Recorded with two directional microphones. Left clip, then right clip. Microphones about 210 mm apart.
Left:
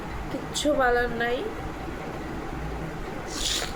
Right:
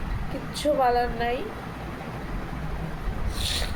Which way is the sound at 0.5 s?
15° left (ahead or behind).